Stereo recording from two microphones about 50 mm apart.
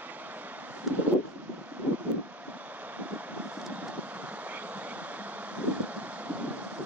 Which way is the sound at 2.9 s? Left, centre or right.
Right.